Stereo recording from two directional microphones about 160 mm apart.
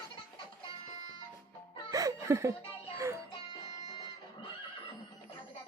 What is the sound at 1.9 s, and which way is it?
Music, 20° right (ahead or behind).